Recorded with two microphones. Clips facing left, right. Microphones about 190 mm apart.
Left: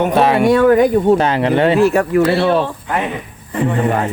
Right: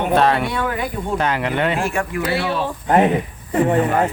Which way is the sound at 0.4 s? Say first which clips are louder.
Left 13 dB; 45° left (ahead or behind).